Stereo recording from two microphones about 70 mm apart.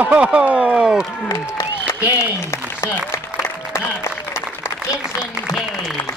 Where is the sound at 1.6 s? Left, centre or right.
Left.